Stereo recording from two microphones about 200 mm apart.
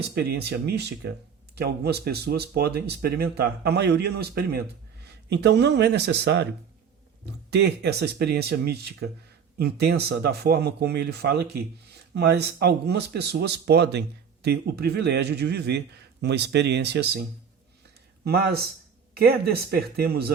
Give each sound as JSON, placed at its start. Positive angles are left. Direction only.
{"t": 0.1, "sound": "speech", "side_deg": -55}
{"t": 7.5, "sound": "speech", "side_deg": -55}
{"t": 18.3, "sound": "speech", "side_deg": -50}